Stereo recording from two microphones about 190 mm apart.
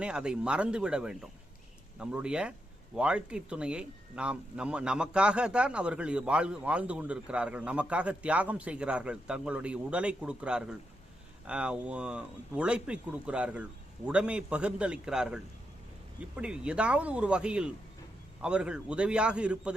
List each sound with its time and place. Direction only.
0.0 s speech: 5° right (ahead or behind)
16.4 s speech: 5° right (ahead or behind)